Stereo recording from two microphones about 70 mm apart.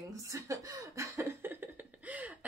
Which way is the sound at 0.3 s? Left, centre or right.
Right.